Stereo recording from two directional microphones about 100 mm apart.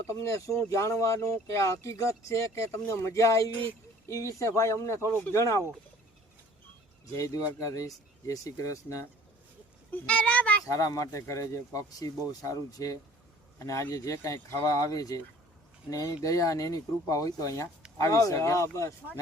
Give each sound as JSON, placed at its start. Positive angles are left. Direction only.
{"t": 0.1, "sound": "speech", "side_deg": 30}
{"t": 7.6, "sound": "speech", "side_deg": 35}
{"t": 9.9, "sound": "a child's voice", "side_deg": 15}
{"t": 10.7, "sound": "speech", "side_deg": 35}